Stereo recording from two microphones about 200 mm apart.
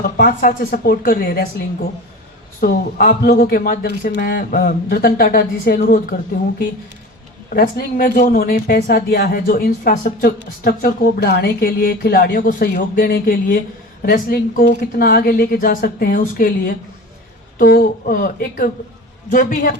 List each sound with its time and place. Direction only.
0.0 s speech: 45° left (ahead or behind)
2.6 s speech: 45° left (ahead or behind)
7.5 s speech: 50° left (ahead or behind)